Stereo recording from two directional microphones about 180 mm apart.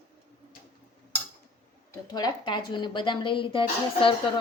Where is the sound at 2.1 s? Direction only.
25° left (ahead or behind).